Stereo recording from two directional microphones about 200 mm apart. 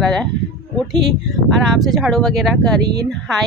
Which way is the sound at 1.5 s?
Centre (ahead or behind).